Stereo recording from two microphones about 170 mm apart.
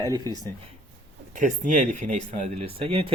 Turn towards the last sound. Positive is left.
turn(degrees=-35)  # may be behind; listen again after turning